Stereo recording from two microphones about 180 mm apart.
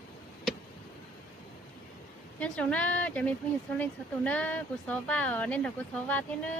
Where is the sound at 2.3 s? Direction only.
5° left (ahead or behind).